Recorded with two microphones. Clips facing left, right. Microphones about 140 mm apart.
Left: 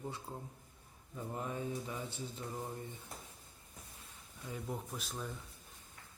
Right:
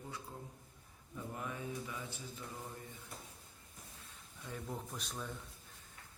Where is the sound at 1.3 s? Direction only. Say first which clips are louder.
Left 4 dB; 30° left (ahead or behind).